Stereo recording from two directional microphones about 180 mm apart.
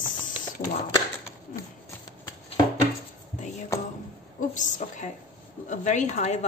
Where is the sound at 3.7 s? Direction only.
15° left (ahead or behind).